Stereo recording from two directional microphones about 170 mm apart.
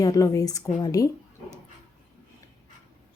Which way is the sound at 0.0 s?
20° left (ahead or behind).